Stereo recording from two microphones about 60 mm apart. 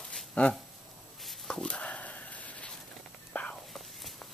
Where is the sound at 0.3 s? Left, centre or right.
Centre.